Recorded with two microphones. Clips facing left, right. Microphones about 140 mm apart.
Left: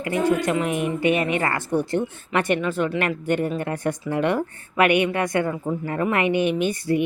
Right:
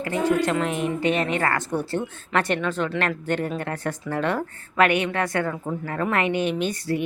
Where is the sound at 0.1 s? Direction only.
10° left (ahead or behind).